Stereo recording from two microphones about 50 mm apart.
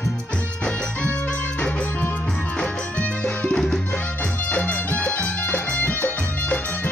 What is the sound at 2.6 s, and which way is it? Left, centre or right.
Music, left.